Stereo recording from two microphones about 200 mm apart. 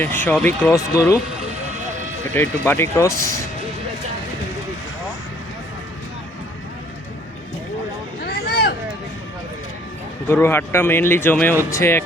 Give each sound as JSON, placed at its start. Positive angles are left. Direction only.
{"t": 0.0, "sound": "speech", "side_deg": 10}
{"t": 2.3, "sound": "speech", "side_deg": 10}
{"t": 8.2, "sound": "a sound", "side_deg": 50}
{"t": 10.2, "sound": "speech", "side_deg": 10}